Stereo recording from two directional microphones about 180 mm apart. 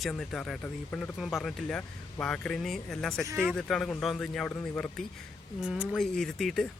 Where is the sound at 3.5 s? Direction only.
Centre (ahead or behind).